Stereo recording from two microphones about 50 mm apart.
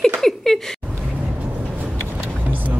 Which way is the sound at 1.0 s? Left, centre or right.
Right.